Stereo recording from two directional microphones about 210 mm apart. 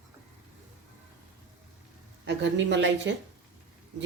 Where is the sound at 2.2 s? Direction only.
55° right (ahead or behind).